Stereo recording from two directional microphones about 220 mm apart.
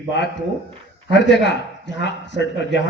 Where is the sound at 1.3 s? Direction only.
55° left (ahead or behind).